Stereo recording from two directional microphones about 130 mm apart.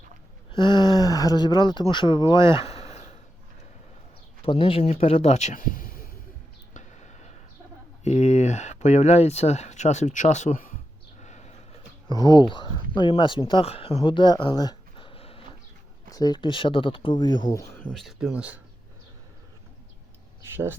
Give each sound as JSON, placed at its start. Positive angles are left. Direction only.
{"t": 0.5, "sound": "speech", "side_deg": 35}
{"t": 4.4, "sound": "speech", "side_deg": 45}
{"t": 6.7, "sound": "a sound", "side_deg": 65}
{"t": 8.0, "sound": "speech", "side_deg": 60}
{"t": 11.2, "sound": "a sound", "side_deg": 60}
{"t": 12.3, "sound": "speech", "side_deg": 40}
{"t": 16.0, "sound": "speech", "side_deg": 30}
{"t": 17.9, "sound": "speech", "side_deg": -5}